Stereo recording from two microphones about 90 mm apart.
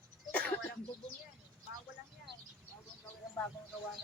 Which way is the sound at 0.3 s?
15° left (ahead or behind).